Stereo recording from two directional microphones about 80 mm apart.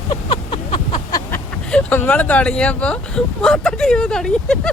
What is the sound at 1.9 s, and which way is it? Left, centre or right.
Speech, left.